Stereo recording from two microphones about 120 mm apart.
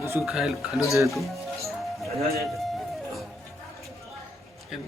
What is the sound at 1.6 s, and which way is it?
Music, centre (ahead or behind).